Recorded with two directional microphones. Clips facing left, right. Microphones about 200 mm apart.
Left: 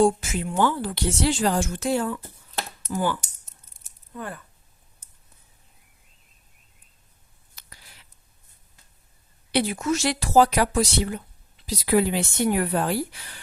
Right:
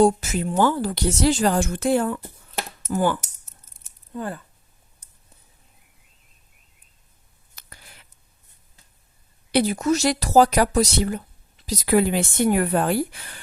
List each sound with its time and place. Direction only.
0.0 s a woman's voice: 40° right (ahead or behind)
4.1 s speech: 30° right (ahead or behind)
7.5 s a sound: 50° right (ahead or behind)
9.5 s a woman's voice: 40° right (ahead or behind)